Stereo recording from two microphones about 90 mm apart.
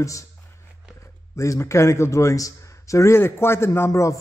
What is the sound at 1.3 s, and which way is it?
A man's voice, 35° left (ahead or behind).